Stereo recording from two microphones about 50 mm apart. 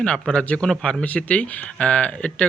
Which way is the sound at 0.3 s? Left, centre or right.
Left.